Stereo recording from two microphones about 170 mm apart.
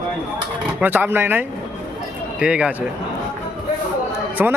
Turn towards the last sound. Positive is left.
turn(degrees=-10)  # may be behind; listen again after turning